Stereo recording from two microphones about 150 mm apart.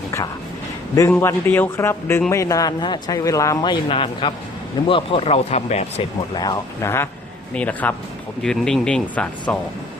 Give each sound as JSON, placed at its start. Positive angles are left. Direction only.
{"t": 1.1, "sound": "speech", "side_deg": 15}
{"t": 6.3, "sound": "speech", "side_deg": 25}